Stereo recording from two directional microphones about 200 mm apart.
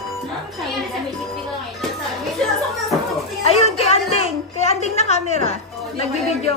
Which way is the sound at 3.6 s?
30° left (ahead or behind).